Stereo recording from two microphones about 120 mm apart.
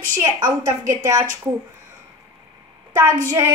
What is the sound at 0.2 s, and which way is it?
A woman's voice, 25° right (ahead or behind).